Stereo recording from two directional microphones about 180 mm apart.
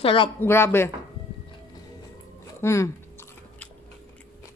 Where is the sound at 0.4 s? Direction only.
15° left (ahead or behind).